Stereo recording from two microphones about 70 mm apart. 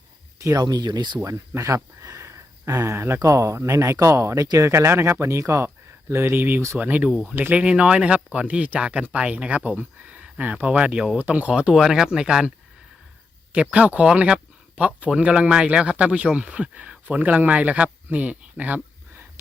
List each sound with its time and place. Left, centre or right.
0.3 s a sound: right
0.6 s speech: right
1.2 s speech: right
3.2 s speech: right; by 11.7 s centre
11.7 s speech: centre
13.5 s speech: centre